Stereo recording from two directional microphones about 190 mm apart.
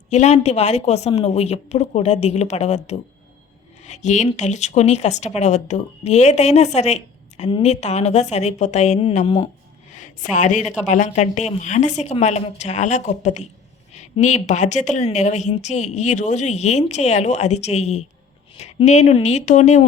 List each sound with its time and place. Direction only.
0.1 s speech: 35° left (ahead or behind)
9.9 s a sound: 40° left (ahead or behind)
10.3 s speech: 40° left (ahead or behind)